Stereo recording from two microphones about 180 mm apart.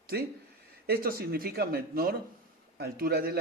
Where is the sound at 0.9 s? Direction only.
55° right (ahead or behind).